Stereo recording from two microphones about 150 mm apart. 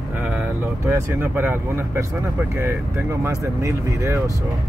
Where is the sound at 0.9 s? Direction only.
15° right (ahead or behind).